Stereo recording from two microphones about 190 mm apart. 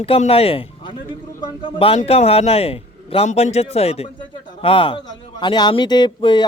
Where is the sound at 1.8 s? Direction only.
30° left (ahead or behind).